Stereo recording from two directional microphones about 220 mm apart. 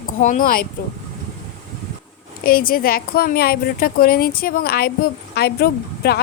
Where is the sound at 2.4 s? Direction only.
40° left (ahead or behind).